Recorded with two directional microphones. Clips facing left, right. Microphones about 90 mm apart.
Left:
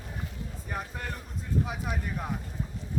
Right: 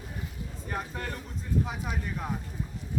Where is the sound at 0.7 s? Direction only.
5° left (ahead or behind).